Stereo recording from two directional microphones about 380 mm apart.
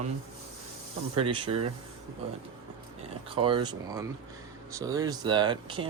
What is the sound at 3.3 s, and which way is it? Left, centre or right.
Speech, centre.